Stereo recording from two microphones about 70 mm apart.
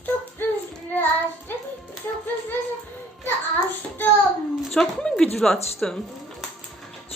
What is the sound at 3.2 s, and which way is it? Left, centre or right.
Child singing, left.